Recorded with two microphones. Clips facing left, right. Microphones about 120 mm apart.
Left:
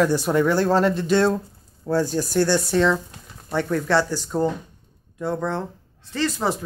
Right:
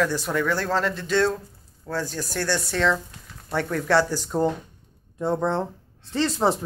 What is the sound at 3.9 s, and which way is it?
Speech, 15° right (ahead or behind).